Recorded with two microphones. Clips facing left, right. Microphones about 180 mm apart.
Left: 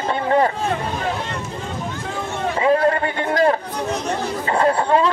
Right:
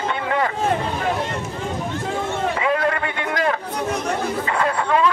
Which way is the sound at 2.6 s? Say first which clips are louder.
Left 7 dB; 35° left (ahead or behind).